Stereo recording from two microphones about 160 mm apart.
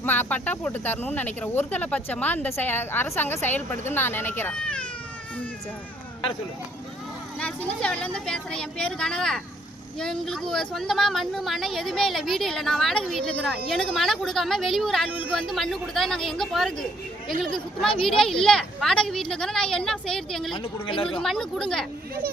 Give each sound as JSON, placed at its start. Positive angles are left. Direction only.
{"t": 0.0, "sound": "speech", "side_deg": 10}
{"t": 7.3, "sound": "speech", "side_deg": 10}
{"t": 20.5, "sound": "speech", "side_deg": 35}
{"t": 21.2, "sound": "speech", "side_deg": 5}